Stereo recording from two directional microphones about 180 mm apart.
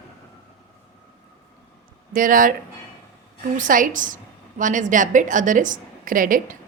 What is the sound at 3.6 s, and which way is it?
A woman's voice, 45° right (ahead or behind).